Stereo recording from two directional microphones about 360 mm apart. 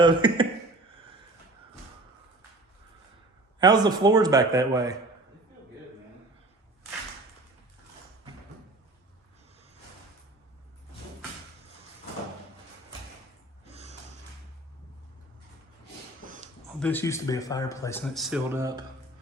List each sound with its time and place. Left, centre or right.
0.0 s speech: centre
3.6 s a man's voice: centre
16.2 s a sound: right
16.8 s speech: centre